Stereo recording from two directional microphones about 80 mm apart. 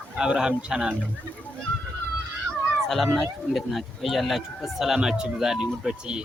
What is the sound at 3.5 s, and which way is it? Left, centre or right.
Speech, centre.